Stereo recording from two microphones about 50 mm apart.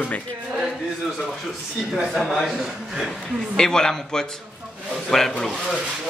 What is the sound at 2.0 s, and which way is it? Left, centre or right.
Speech, centre.